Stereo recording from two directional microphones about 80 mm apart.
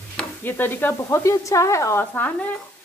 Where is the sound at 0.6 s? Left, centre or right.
Left.